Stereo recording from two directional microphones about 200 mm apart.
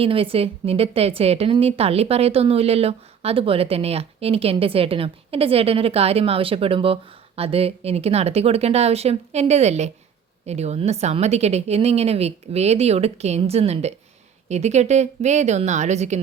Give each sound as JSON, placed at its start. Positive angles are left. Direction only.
{"t": 0.0, "sound": "a woman's voice", "side_deg": -25}